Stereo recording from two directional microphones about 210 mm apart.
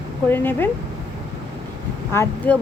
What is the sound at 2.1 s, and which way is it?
Speech, 10° left (ahead or behind).